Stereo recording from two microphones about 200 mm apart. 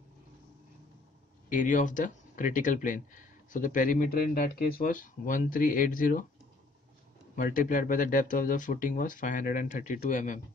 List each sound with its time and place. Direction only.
1.5 s speech: 40° left (ahead or behind)
7.3 s speech: 45° left (ahead or behind)